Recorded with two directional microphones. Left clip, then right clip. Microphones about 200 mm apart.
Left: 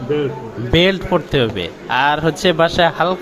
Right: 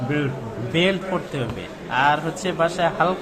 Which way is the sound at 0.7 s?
30° left (ahead or behind).